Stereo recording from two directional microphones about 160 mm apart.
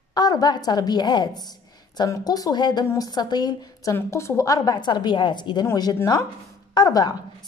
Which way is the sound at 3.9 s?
15° left (ahead or behind).